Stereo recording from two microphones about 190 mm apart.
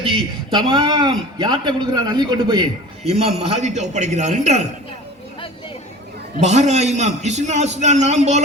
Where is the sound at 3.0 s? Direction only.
35° right (ahead or behind).